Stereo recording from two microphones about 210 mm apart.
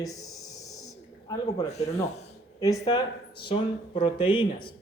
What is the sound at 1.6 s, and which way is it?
Speech, 30° left (ahead or behind).